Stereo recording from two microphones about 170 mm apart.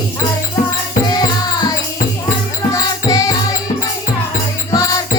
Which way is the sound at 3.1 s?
20° left (ahead or behind).